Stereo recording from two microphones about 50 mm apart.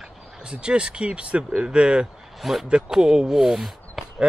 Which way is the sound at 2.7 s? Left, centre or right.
Centre.